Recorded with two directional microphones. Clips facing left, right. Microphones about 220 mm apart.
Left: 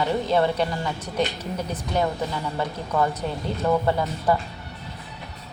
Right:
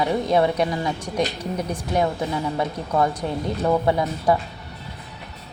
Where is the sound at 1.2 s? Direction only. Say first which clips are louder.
Right 1 dB; 30° right (ahead or behind).